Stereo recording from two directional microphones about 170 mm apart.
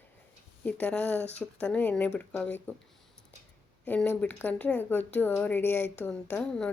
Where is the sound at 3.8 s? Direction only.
10° left (ahead or behind).